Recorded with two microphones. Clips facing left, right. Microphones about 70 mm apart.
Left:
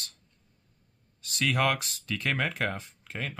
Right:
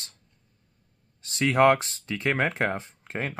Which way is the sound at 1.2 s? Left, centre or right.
Right.